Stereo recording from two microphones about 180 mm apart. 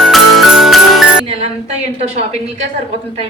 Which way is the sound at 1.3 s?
35° right (ahead or behind).